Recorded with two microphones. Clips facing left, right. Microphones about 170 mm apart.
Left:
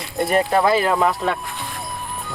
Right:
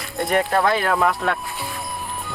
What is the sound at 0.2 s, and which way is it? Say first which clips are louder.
Speech: left 2 dB; 5° left (ahead or behind).